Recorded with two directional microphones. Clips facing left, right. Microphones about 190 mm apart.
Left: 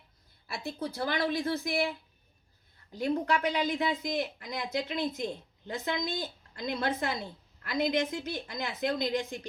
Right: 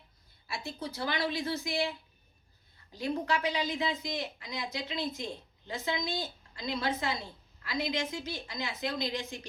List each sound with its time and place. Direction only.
0.8 s speech: 50° left (ahead or behind)
2.9 s a woman's voice: 55° left (ahead or behind)